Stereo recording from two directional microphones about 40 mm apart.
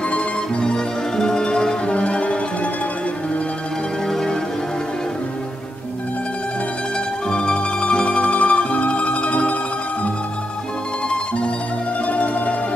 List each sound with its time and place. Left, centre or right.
0.6 s music: centre
4.1 s music: centre
7.2 s mandolin: left
11.1 s music: left
12.1 s music: left